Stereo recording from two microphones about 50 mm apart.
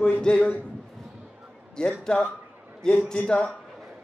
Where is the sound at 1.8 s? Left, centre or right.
Centre.